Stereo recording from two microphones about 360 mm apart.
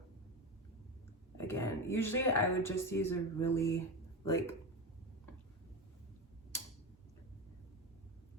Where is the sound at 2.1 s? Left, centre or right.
Left.